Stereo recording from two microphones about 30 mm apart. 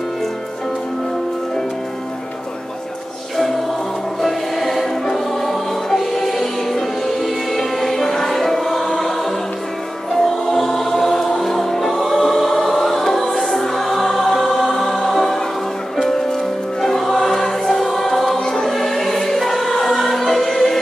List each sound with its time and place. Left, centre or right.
4.2 s music: centre
10.6 s choir: centre
11.3 s music: centre
16.8 s choir: centre
18.4 s music: left
18.7 s choir: centre